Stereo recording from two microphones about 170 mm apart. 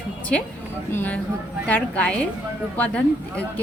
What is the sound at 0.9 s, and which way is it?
Speech, 10° left (ahead or behind).